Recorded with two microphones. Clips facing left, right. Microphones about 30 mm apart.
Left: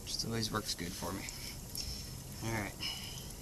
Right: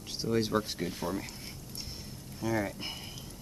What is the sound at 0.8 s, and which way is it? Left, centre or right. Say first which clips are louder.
Speech: right 7 dB; right.